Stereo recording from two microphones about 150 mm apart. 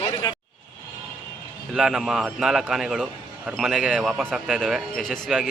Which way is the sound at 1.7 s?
5° right (ahead or behind).